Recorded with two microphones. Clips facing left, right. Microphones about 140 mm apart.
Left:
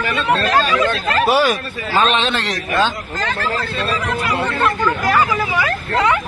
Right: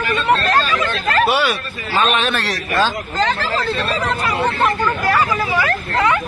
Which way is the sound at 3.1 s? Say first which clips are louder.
Right 5 dB; 30° right (ahead or behind).